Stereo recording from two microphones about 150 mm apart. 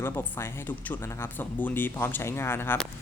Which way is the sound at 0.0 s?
15° left (ahead or behind).